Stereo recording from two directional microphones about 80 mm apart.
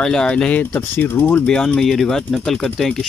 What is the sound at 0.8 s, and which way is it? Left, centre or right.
Speech, left.